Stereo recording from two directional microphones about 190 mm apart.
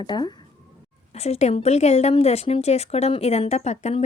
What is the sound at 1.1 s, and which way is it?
A woman's voice, 35° left (ahead or behind).